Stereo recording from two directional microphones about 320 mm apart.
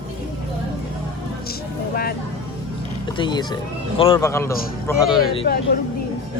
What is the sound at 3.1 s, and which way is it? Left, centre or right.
Speech, centre.